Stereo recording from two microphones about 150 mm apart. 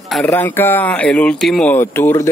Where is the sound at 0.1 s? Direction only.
10° left (ahead or behind).